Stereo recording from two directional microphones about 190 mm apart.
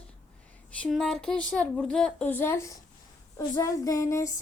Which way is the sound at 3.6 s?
15° left (ahead or behind).